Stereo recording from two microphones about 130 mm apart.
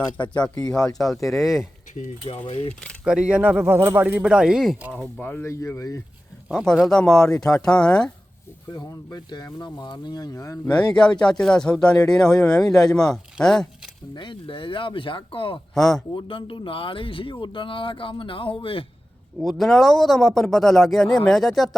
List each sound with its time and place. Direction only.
0.9 s a man's voice: centre (ahead or behind)
2.3 s speech: 45° left (ahead or behind)
3.0 s a man's voice: 5° right (ahead or behind)
5.2 s speech: 15° left (ahead or behind)
6.5 s a man's voice: 5° left (ahead or behind)
8.7 s speech: 30° left (ahead or behind)
10.9 s a man's voice: 5° left (ahead or behind)
14.2 s speech: 40° left (ahead or behind)
15.7 s a man's voice: centre (ahead or behind)
16.1 s speech: 40° left (ahead or behind)
19.4 s a man's voice: centre (ahead or behind)